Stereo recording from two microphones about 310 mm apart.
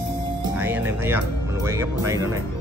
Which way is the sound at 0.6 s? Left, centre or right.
Centre.